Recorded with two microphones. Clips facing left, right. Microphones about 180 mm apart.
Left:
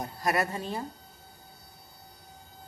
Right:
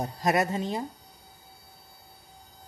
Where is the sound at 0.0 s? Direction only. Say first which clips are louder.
Right 3 dB; 20° right (ahead or behind).